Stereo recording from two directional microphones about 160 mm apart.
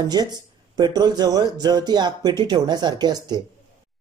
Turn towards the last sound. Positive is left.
turn(degrees=-25)  # may be behind; listen again after turning